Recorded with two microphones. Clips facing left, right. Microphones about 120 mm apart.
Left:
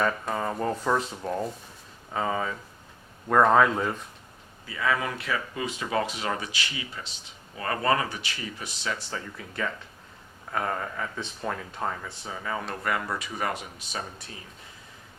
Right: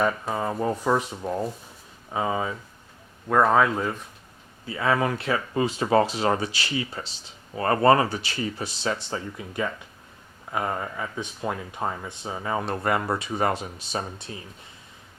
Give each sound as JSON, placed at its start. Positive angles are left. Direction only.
{"t": 0.0, "sound": "speech", "side_deg": -5}
{"t": 3.2, "sound": "speech", "side_deg": 0}
{"t": 4.6, "sound": "speech", "side_deg": -30}